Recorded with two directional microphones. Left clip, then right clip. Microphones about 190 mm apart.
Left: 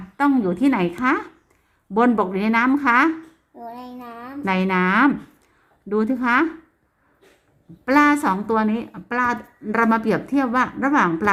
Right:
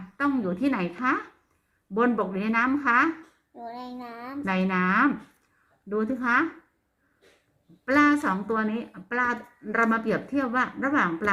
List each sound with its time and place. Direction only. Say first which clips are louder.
0.2 s a woman's voice: left 7 dB; 60° left (ahead or behind)
3.8 s a child's voice: left 2 dB; 25° right (ahead or behind)
4.4 s a woman's voice: left 6 dB; 55° left (ahead or behind)
7.9 s a woman's voice: left 5 dB; 55° left (ahead or behind)